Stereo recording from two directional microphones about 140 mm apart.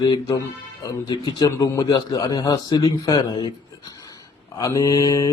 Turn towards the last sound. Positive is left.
turn(degrees=25)  # may be behind; listen again after turning